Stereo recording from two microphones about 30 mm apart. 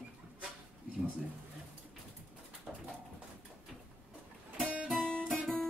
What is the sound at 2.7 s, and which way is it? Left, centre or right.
Pigeon, right.